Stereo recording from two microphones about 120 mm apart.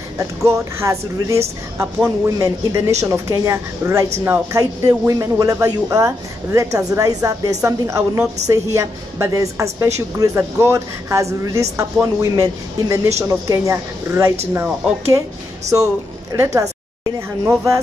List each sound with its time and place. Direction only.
0.2 s speech: 25° right (ahead or behind)